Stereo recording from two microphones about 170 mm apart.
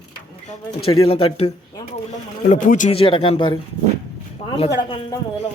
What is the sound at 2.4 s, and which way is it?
Speech, 50° left (ahead or behind).